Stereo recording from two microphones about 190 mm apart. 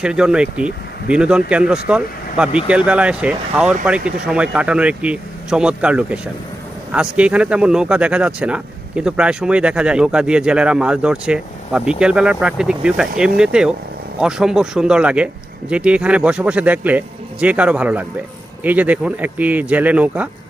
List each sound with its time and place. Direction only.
0.0 s a man's voice: 5° right (ahead or behind)